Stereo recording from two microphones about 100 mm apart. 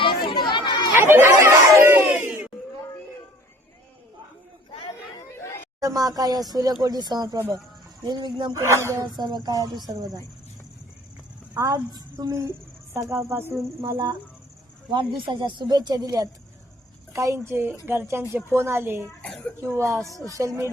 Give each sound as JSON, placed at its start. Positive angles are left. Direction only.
{"t": 0.0, "sound": "chatter", "side_deg": 60}
{"t": 0.9, "sound": "music", "side_deg": -25}
{"t": 5.3, "sound": "chatter", "side_deg": 30}
{"t": 5.8, "sound": "speech", "side_deg": -40}
{"t": 8.5, "sound": "a woman's voice", "side_deg": -30}
{"t": 9.0, "sound": "speech", "side_deg": -45}
{"t": 11.5, "sound": "a woman's voice", "side_deg": -35}
{"t": 14.8, "sound": "a woman's voice", "side_deg": -55}
{"t": 19.2, "sound": "a child's voice", "side_deg": 10}
{"t": 19.7, "sound": "a woman's voice", "side_deg": -25}